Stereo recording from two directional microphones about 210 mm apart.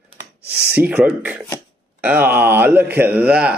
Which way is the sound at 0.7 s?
10° right (ahead or behind).